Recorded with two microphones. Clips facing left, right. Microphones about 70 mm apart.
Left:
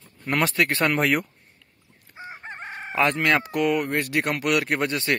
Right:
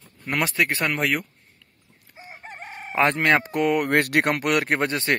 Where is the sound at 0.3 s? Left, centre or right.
Centre.